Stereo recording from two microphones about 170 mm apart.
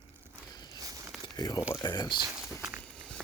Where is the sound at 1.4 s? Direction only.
25° left (ahead or behind).